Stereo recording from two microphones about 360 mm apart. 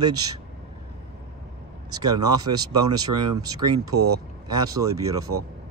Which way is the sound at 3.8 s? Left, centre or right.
Right.